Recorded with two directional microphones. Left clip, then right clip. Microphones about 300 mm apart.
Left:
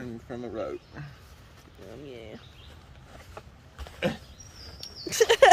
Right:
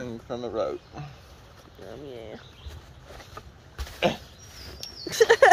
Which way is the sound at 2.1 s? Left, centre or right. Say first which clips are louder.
Right 3 dB; centre.